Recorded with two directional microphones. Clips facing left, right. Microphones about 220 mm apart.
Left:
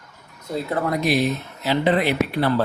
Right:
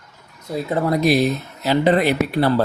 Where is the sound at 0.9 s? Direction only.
35° right (ahead or behind).